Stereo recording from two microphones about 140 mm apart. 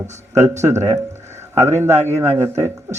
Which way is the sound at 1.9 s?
55° right (ahead or behind).